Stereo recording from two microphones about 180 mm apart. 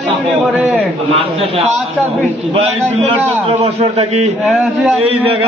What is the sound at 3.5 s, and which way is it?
Speech, 35° right (ahead or behind).